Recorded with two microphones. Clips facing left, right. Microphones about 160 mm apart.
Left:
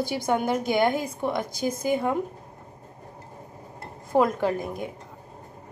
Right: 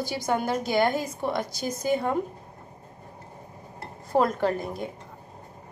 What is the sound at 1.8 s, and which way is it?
Speech, 10° left (ahead or behind).